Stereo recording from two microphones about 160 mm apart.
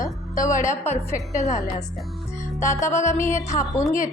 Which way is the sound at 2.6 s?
20° left (ahead or behind).